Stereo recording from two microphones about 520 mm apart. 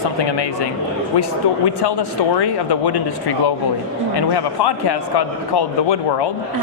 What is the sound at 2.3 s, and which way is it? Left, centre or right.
Speech, left.